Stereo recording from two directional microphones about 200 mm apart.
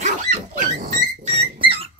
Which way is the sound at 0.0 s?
40° right (ahead or behind).